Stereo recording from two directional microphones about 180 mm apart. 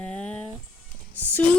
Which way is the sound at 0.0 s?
5° left (ahead or behind).